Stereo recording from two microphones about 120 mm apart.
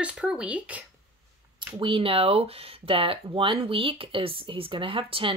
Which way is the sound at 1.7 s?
45° right (ahead or behind).